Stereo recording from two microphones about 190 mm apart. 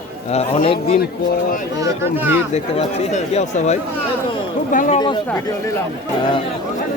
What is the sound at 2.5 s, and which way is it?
A man's voice, 35° left (ahead or behind).